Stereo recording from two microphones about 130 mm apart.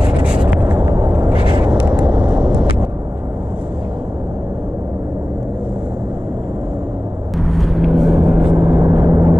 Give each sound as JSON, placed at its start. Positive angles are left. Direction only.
{"t": 0.2, "sound": "a sound", "side_deg": -10}
{"t": 1.3, "sound": "vehicle", "side_deg": -40}
{"t": 2.0, "sound": "vehicle", "side_deg": -5}
{"t": 7.3, "sound": "vehicle", "side_deg": 0}